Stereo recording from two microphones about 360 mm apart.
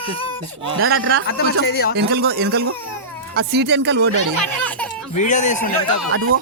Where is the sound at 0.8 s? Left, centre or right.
Right.